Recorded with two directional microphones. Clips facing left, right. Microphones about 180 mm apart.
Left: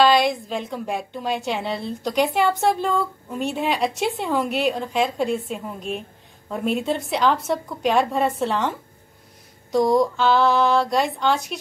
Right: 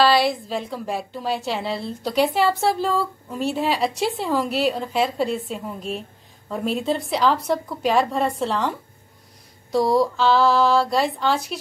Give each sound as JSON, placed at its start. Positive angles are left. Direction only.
{"t": 0.0, "sound": "a woman's voice", "side_deg": 0}